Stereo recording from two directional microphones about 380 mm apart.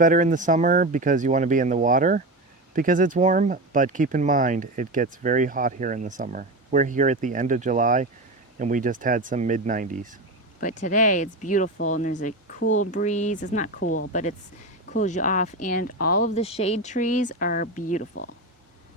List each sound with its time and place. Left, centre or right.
0.0 s speech: right
10.6 s speech: centre
13.8 s speech: left
14.1 s speech: centre